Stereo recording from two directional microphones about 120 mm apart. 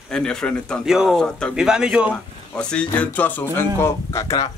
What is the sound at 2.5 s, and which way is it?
Speech, 10° left (ahead or behind).